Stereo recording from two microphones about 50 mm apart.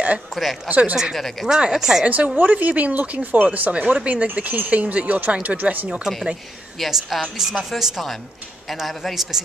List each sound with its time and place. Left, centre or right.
0.3 s a man's voice: centre
0.7 s speech: right
1.1 s a man's voice: centre
1.6 s speech: centre
2.0 s speech: right
6.8 s a man's voice: centre
8.6 s a man's voice: centre